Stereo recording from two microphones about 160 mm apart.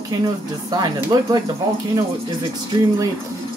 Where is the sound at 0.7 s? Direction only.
25° right (ahead or behind).